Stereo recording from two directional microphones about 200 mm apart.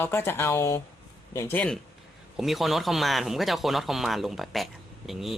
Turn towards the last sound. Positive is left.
turn(degrees=0)  # may be behind; listen again after turning